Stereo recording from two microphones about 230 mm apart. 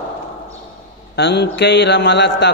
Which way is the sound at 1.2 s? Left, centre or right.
Left.